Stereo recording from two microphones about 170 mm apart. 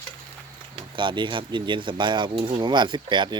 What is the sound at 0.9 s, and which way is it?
Speech, 30° right (ahead or behind).